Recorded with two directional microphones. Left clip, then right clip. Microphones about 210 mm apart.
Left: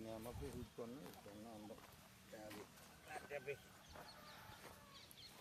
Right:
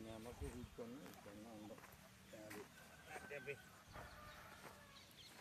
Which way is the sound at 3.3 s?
30° left (ahead or behind).